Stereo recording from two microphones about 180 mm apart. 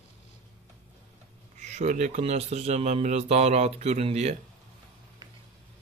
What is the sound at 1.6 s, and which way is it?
Speech, 40° right (ahead or behind).